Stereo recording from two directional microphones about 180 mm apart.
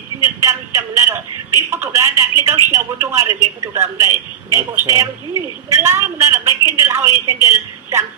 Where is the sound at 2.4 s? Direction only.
15° right (ahead or behind).